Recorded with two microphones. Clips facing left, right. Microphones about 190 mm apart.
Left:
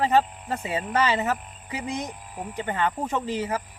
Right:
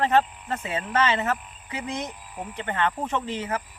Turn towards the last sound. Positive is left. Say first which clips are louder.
# left 1 dB
turn(degrees=10)  # may be behind; listen again after turning